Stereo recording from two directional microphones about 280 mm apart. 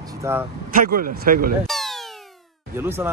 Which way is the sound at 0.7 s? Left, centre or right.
Right.